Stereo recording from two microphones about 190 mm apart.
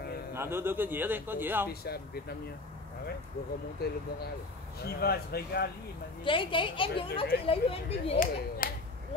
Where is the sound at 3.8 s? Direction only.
55° left (ahead or behind).